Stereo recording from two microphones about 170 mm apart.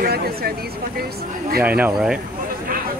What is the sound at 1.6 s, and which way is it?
Speech, 10° right (ahead or behind).